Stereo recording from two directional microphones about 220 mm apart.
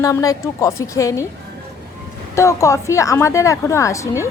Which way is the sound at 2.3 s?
15° left (ahead or behind).